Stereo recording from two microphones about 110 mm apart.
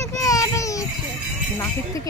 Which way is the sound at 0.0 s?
30° left (ahead or behind).